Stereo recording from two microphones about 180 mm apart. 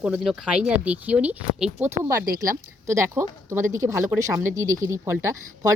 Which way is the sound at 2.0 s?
15° right (ahead or behind).